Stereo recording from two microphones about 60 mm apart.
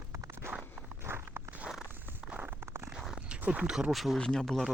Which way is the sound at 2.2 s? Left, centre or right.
Right.